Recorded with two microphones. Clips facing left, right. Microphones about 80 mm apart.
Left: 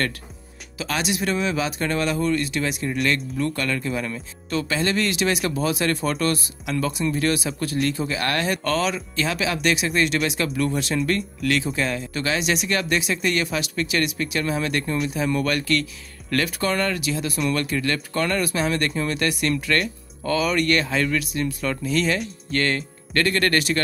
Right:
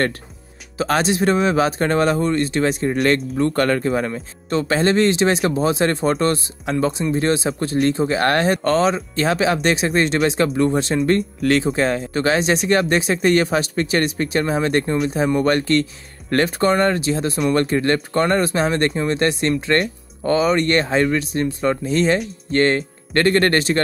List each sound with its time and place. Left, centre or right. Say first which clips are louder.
0.7 s speech: right 7 dB; right